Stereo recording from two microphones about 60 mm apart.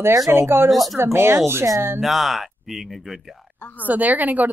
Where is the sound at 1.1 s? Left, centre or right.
Right.